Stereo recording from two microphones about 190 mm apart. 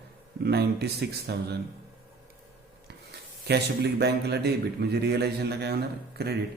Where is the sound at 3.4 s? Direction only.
60° right (ahead or behind).